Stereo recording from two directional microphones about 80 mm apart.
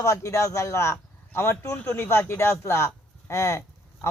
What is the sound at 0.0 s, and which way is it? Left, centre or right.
A man's voice, left.